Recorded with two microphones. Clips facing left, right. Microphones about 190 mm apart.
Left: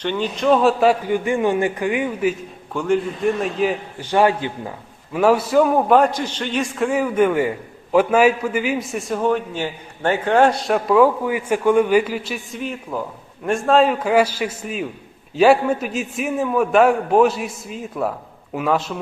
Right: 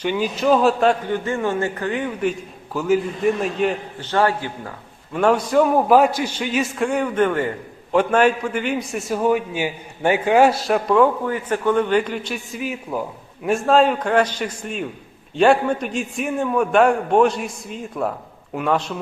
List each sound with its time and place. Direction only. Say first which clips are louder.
0.0 s a man's voice: even; 10° right (ahead or behind); by 2.3 s 10° left (ahead or behind)
2.7 s a man's voice: even; 5° right (ahead or behind)
4.1 s a man's voice: left 3 dB; 15° left (ahead or behind)
5.1 s a man's voice: left 1 dB; 5° left (ahead or behind)